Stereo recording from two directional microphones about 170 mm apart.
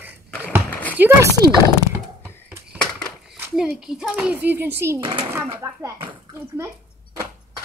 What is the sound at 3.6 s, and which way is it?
A child's voice, 5° right (ahead or behind).